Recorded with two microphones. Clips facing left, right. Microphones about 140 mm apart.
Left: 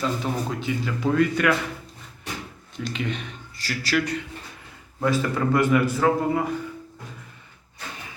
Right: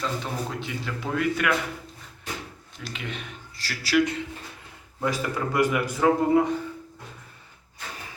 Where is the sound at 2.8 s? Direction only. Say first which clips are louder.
Left 6 dB; centre (ahead or behind).